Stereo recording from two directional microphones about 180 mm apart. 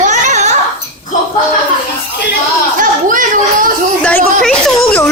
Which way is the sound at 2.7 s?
50° right (ahead or behind).